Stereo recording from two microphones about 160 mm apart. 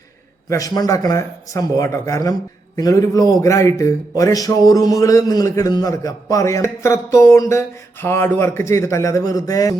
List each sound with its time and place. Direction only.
0.5 s a man's voice: 25° left (ahead or behind)